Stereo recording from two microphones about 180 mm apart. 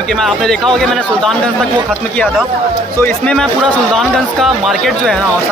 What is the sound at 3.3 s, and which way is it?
Speech, 5° left (ahead or behind).